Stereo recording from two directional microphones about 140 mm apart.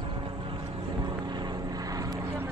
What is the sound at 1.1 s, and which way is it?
Vehicle, 30° right (ahead or behind).